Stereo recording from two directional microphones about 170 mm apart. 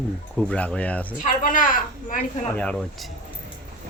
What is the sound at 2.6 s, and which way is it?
Speech, 5° left (ahead or behind).